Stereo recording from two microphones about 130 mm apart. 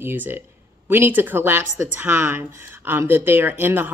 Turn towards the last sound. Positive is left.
turn(degrees=-15)  # may be behind; listen again after turning